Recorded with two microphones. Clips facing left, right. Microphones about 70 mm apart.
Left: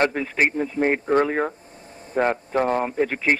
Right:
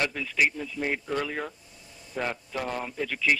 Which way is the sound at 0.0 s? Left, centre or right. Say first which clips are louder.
Left 6 dB; left.